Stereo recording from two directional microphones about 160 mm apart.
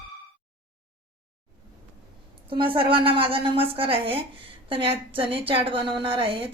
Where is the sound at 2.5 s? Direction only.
35° right (ahead or behind).